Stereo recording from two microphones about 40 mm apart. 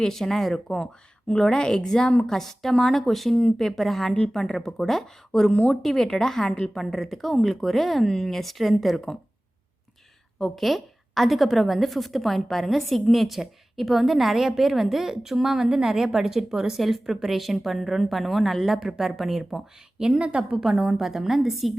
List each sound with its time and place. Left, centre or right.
0.0 s a woman's voice: centre
10.4 s a woman's voice: centre
20.0 s a woman's voice: centre
20.6 s a woman's voice: centre